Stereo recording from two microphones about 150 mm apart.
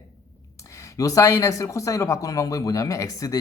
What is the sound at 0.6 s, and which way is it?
Speech, 20° left (ahead or behind).